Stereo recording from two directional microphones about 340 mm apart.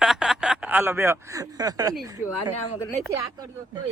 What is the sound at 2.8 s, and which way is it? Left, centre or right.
Speech, centre.